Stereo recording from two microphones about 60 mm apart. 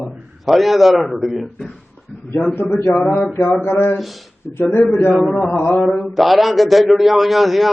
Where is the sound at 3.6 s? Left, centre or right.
Left.